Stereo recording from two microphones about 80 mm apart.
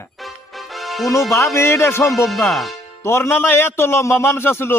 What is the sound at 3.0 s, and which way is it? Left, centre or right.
A man's voice, left.